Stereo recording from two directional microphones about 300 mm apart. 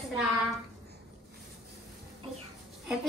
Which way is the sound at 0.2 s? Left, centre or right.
Centre.